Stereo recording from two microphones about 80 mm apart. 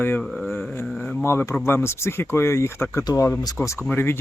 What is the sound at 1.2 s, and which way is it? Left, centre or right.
Speech, left.